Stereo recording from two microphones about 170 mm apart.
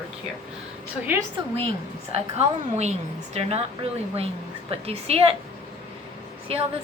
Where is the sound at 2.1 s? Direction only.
40° right (ahead or behind).